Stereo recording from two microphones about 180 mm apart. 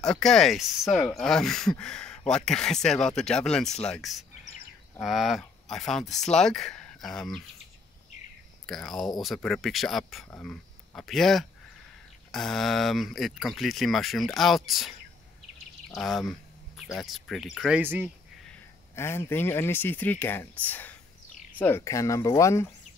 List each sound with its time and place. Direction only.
0.0 s speech: 5° left (ahead or behind)
8.6 s speech: centre (ahead or behind)
16.0 s speech: centre (ahead or behind)
18.5 s speech: 15° left (ahead or behind)